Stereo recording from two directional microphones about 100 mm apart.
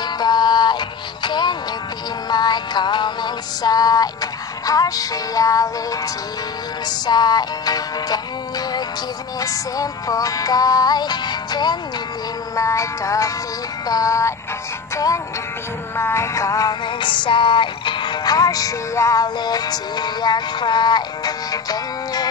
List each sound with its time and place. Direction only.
0.0 s music: 45° left (ahead or behind)
7.1 s music: 45° left (ahead or behind)
12.5 s music: 30° left (ahead or behind)
16.0 s music: 25° left (ahead or behind)
16.8 s music: 55° left (ahead or behind)